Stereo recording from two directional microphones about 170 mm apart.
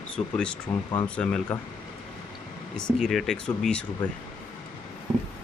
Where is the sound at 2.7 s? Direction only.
5° left (ahead or behind).